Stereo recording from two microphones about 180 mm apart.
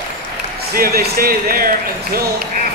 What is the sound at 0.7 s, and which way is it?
Speech, 55° right (ahead or behind).